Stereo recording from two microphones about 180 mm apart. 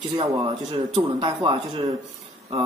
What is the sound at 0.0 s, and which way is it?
Speech, 25° right (ahead or behind).